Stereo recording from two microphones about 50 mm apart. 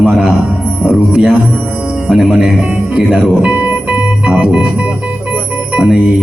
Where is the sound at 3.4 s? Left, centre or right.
Right.